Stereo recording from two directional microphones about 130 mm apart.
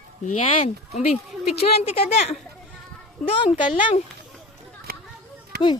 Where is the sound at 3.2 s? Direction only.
5° left (ahead or behind).